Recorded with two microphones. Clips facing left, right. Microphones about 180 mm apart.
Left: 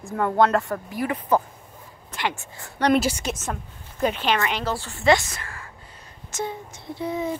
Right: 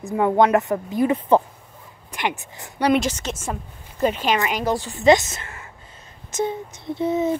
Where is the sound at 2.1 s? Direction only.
15° right (ahead or behind).